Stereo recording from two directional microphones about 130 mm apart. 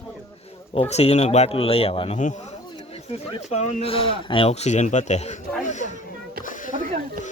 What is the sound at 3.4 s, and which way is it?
Speech, 65° left (ahead or behind).